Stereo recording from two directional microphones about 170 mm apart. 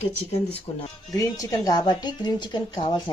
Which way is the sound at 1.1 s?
20° left (ahead or behind).